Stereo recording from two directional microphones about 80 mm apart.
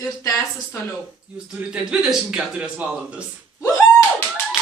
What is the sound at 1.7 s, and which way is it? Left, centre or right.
Speech, centre.